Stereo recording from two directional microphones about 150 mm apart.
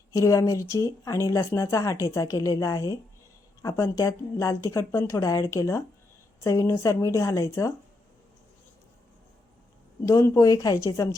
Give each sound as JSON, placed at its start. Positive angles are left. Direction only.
{"t": 0.1, "sound": "speech", "side_deg": 20}
{"t": 10.1, "sound": "speech", "side_deg": 20}